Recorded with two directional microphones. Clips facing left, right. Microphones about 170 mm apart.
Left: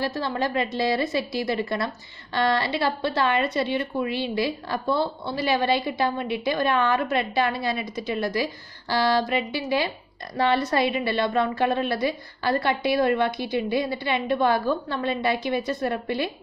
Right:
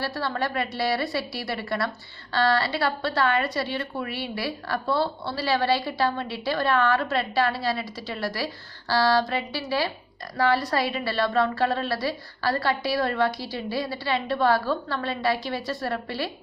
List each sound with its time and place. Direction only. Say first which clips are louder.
0.0 s a woman's voice: left 2 dB; 20° left (ahead or behind)